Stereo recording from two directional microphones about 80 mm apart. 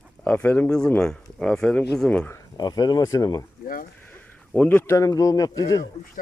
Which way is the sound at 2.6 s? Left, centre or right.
Left.